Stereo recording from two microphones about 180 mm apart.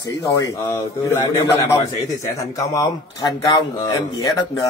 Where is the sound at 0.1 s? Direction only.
15° left (ahead or behind).